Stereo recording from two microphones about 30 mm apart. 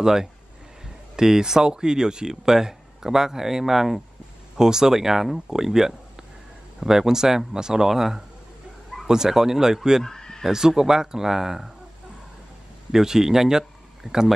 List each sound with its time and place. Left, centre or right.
0.0 s speech: centre
10.0 s neigh: centre
10.8 s speech: centre
12.9 s speech: centre